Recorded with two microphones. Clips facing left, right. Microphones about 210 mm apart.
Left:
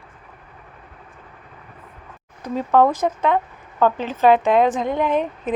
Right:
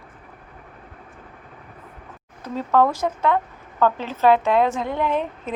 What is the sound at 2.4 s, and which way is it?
Speech, 15° left (ahead or behind).